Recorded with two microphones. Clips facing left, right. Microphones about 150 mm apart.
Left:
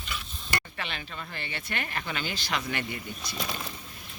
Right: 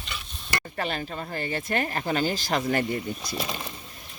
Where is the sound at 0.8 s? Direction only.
40° right (ahead or behind).